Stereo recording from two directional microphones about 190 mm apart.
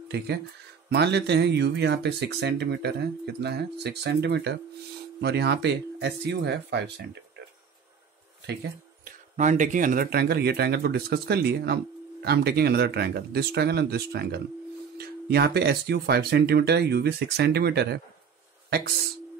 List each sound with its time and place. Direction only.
0.8 s speech: 60° right (ahead or behind)
8.5 s speech: 60° right (ahead or behind)
9.4 s speech: 40° right (ahead or behind); by 18.0 s 60° right (ahead or behind)